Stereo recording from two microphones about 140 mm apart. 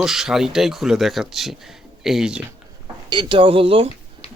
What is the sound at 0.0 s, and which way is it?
Speech, 5° right (ahead or behind).